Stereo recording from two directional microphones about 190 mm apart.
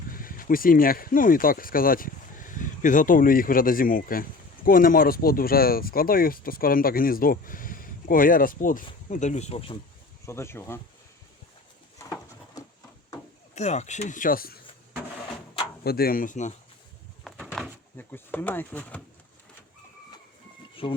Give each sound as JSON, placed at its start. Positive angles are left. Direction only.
{"t": 0.1, "sound": "speech", "side_deg": 50}
{"t": 10.2, "sound": "speech", "side_deg": 15}
{"t": 13.6, "sound": "speech", "side_deg": 35}
{"t": 15.8, "sound": "speech", "side_deg": 55}
{"t": 17.2, "sound": "a sound", "side_deg": 5}
{"t": 17.9, "sound": "speech", "side_deg": 10}
{"t": 20.8, "sound": "speech", "side_deg": 30}